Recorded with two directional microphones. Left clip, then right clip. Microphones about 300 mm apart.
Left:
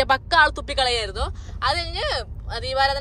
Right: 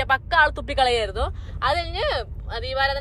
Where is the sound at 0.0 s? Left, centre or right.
Left.